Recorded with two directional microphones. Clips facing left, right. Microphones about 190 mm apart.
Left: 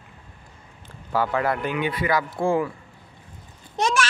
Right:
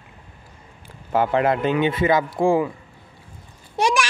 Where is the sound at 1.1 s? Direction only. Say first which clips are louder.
Right 4 dB; 20° right (ahead or behind).